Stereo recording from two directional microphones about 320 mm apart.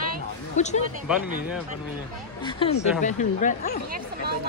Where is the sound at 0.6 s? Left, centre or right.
Left.